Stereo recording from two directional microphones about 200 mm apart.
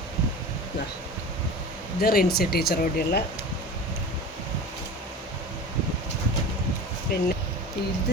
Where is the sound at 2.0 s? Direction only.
50° left (ahead or behind).